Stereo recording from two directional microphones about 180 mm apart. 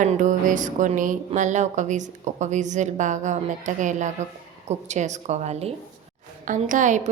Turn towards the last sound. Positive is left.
turn(degrees=-45)  # may be behind; listen again after turning